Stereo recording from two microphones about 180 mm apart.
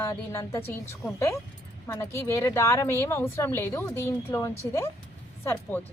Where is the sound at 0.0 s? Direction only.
15° left (ahead or behind).